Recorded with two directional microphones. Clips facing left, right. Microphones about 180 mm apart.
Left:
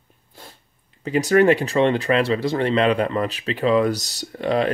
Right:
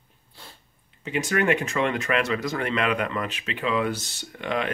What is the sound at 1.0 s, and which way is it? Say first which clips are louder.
Speech: left 8 dB; 35° left (ahead or behind).